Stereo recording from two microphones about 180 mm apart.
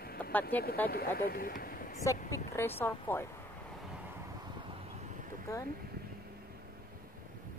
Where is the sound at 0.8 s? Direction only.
55° left (ahead or behind).